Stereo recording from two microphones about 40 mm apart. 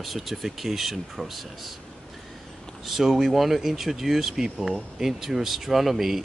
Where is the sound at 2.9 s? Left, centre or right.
Centre.